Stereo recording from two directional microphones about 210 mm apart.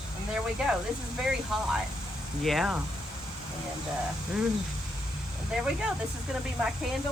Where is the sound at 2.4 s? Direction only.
Centre (ahead or behind).